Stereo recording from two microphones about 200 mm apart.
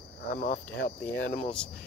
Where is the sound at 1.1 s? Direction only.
5° left (ahead or behind).